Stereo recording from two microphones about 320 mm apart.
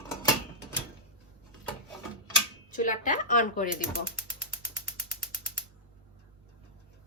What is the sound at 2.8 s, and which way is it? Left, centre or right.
Speech, left.